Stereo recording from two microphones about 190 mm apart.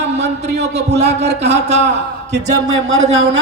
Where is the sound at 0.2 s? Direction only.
60° right (ahead or behind).